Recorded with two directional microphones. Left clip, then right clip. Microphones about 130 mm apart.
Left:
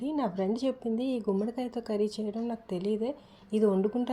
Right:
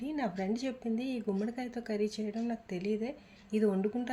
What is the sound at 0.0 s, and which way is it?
A woman's voice, 15° left (ahead or behind).